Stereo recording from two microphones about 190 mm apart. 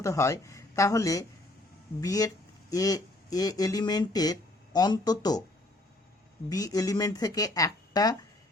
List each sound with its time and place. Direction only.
0.0 s speech: 15° left (ahead or behind)
6.5 s speech: 20° left (ahead or behind)